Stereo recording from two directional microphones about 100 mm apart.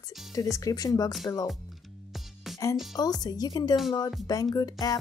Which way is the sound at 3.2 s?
40° left (ahead or behind).